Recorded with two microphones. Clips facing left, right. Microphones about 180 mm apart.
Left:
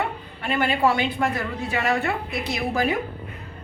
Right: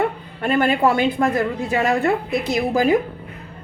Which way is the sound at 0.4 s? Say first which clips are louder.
Right 6 dB; 50° right (ahead or behind).